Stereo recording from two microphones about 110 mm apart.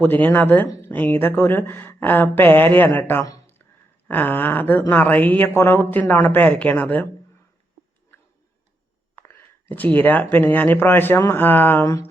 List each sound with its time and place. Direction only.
0.0 s speech: 15° left (ahead or behind)
9.1 s speech: 20° left (ahead or behind)